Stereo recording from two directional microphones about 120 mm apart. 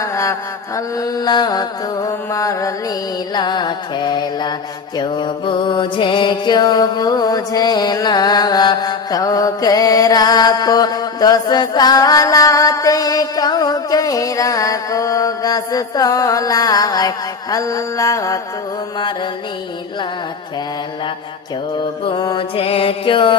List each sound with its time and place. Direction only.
0.0 s mantra: 25° left (ahead or behind)
3.3 s music: 35° left (ahead or behind)
4.9 s mantra: 40° left (ahead or behind)
22.0 s mantra: 35° left (ahead or behind)
22.5 s music: 55° left (ahead or behind)